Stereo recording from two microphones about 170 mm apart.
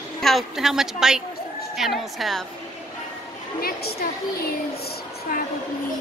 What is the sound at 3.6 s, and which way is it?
Speech, 65° left (ahead or behind).